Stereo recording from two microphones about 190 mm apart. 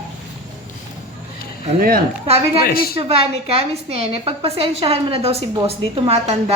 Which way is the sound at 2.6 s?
50° left (ahead or behind).